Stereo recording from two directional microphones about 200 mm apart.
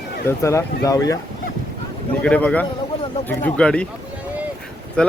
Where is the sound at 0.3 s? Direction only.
15° left (ahead or behind).